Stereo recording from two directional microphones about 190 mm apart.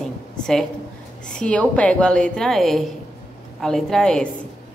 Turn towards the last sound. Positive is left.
turn(degrees=5)  # may be behind; listen again after turning